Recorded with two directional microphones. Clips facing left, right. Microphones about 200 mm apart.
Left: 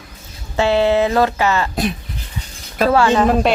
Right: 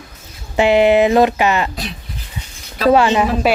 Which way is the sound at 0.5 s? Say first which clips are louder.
Right 3 dB; 15° right (ahead or behind).